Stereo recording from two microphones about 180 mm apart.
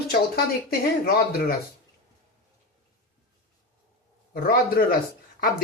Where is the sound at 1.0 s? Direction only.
55° left (ahead or behind).